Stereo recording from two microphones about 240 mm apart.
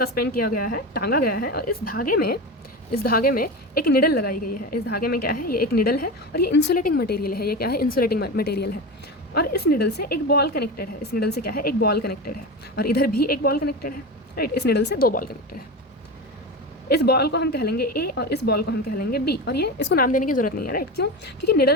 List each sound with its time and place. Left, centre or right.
0.0 s a woman's voice: left
16.9 s a woman's voice: left